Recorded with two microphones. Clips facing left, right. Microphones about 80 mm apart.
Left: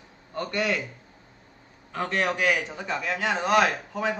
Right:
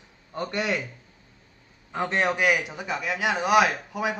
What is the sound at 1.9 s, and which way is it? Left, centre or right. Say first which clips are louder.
A man's voice: right 2 dB; right.